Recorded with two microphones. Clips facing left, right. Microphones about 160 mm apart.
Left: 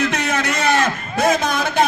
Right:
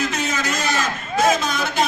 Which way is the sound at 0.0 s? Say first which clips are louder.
Left 3 dB; 60° left (ahead or behind).